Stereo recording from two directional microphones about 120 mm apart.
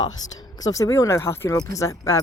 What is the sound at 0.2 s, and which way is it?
A woman's voice, 35° left (ahead or behind).